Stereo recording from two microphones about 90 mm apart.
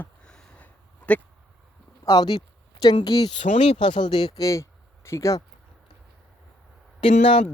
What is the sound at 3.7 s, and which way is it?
Speech, 70° left (ahead or behind).